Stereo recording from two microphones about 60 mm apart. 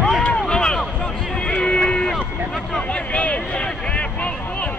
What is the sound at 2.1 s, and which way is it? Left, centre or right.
Vehicle, centre.